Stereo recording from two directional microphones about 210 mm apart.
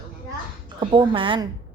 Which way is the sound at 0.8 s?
25° right (ahead or behind).